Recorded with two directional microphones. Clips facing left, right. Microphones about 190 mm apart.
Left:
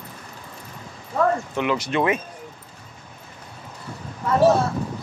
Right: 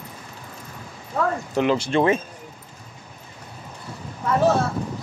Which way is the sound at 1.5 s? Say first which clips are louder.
Right 3 dB; 35° right (ahead or behind).